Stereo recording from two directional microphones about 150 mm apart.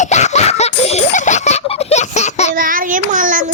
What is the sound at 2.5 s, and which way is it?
Child singing, 65° right (ahead or behind).